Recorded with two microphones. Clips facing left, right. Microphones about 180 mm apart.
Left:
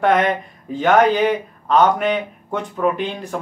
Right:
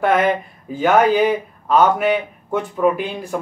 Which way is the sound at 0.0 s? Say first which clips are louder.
Even; 5° right (ahead or behind).